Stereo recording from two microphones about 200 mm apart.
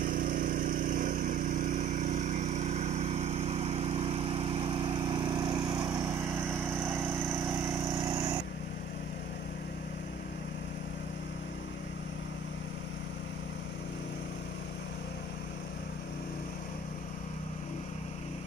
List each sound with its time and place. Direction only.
0.0 s vehicle: 40° right (ahead or behind); by 8.4 s 20° right (ahead or behind)